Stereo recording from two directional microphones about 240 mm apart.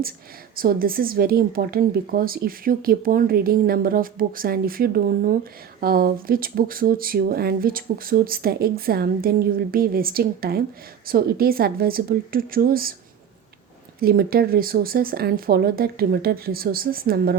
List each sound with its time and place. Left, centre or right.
0.5 s a woman's voice: right
14.0 s a woman's voice: right